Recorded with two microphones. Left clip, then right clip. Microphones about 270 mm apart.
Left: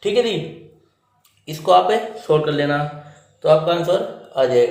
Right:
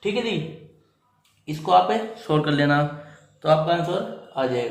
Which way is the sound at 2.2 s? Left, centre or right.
Centre.